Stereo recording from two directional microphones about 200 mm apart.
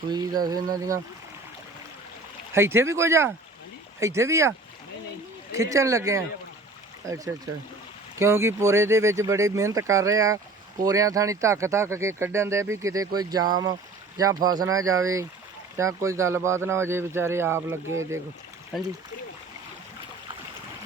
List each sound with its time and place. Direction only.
0.1 s a sound: 20° right (ahead or behind)
2.5 s speech: 10° right (ahead or behind)
8.2 s speech: 15° right (ahead or behind)
13.3 s a sound: 20° right (ahead or behind)
14.2 s speech: 20° right (ahead or behind)
18.7 s speech: centre (ahead or behind)